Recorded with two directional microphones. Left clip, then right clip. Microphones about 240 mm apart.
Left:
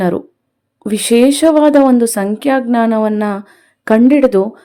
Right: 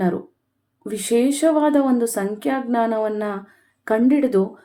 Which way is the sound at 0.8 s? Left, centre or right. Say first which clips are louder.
Left 9 dB; left.